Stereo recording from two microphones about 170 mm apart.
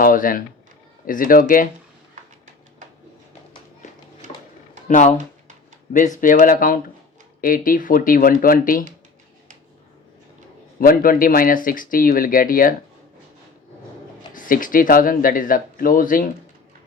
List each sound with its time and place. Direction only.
0.0 s speech: 55° left (ahead or behind)
4.9 s speech: 45° left (ahead or behind)
6.1 s speech: 55° left (ahead or behind)
10.8 s speech: 55° left (ahead or behind)
14.3 s speech: 50° left (ahead or behind)